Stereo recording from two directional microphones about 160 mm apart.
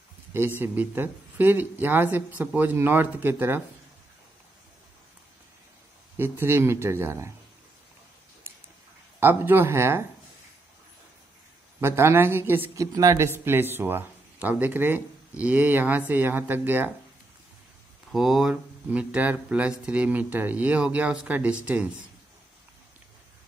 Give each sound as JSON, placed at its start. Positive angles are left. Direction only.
{"t": 0.6, "sound": "speech", "side_deg": -10}
{"t": 6.1, "sound": "speech", "side_deg": -15}
{"t": 9.2, "sound": "speech", "side_deg": -15}
{"t": 11.8, "sound": "speech", "side_deg": -15}
{"t": 18.1, "sound": "speech", "side_deg": 0}